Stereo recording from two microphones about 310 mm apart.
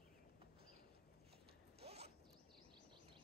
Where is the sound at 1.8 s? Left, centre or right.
Centre.